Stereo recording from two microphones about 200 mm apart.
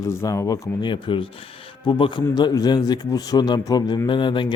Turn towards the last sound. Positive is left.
turn(degrees=25)  # may be behind; listen again after turning